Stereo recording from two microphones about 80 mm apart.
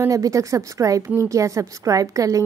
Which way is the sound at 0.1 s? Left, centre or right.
Right.